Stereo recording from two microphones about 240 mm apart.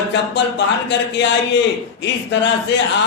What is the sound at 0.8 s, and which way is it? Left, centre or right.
Speech, left.